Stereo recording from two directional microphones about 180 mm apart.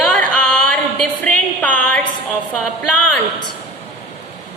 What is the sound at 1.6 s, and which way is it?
Music, 5° left (ahead or behind).